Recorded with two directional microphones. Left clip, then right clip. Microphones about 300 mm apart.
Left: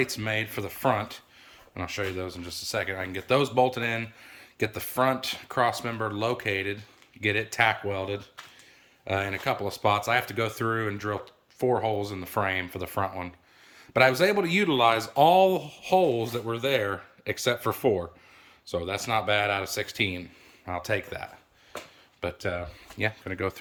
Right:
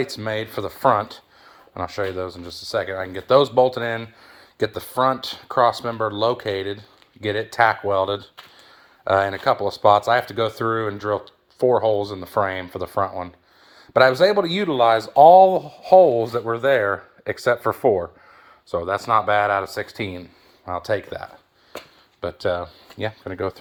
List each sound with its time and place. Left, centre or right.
0.0 s speech: centre
0.8 s speech: centre
9.1 s speech: centre
21.7 s a sound: right
22.2 s speech: centre
23.0 s speech: centre